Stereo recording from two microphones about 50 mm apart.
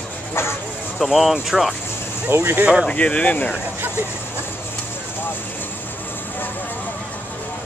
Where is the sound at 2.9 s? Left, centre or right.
Left.